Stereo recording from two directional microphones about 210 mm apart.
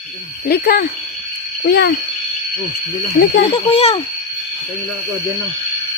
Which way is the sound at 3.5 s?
30° left (ahead or behind).